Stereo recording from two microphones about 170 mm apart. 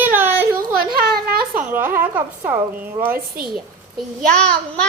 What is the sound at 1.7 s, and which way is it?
Speech, 10° right (ahead or behind).